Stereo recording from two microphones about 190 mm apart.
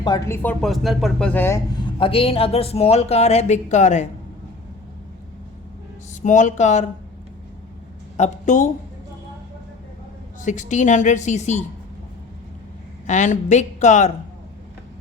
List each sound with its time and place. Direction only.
0.0 s speech: 20° left (ahead or behind)
0.4 s speech: centre (ahead or behind)
2.0 s speech: 30° left (ahead or behind)
6.2 s speech: 40° left (ahead or behind)
8.1 s speech: 40° left (ahead or behind)
10.4 s speech: 40° left (ahead or behind)
13.1 s speech: 40° left (ahead or behind)